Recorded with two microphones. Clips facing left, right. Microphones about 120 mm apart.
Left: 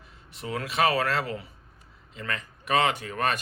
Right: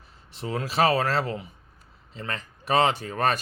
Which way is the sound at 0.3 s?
30° right (ahead or behind).